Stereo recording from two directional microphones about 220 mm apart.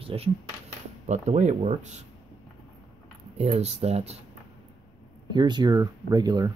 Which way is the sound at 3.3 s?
30° right (ahead or behind).